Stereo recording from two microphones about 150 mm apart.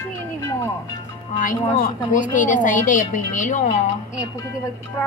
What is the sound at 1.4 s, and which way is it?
A woman's voice, 65° left (ahead or behind).